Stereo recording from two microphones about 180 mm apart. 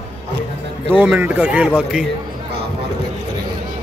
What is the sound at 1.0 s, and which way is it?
A man's voice, 10° right (ahead or behind).